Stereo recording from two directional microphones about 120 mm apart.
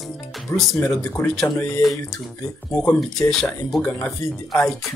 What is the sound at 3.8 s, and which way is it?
Speech, 20° left (ahead or behind).